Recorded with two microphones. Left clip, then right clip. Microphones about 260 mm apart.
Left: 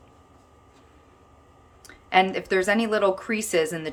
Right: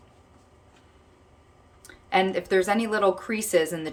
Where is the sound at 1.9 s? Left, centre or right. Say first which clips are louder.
Left 3 dB; centre.